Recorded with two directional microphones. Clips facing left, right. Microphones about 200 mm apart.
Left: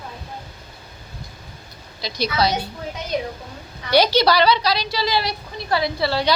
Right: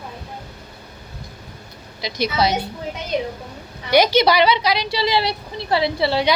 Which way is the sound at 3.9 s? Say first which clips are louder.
Right 1 dB; 20° right (ahead or behind).